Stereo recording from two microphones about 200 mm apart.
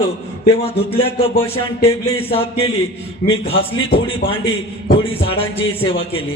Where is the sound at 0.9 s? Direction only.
30° left (ahead or behind).